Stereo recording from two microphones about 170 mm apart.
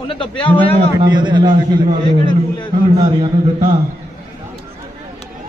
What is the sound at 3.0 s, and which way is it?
Speech, 35° right (ahead or behind).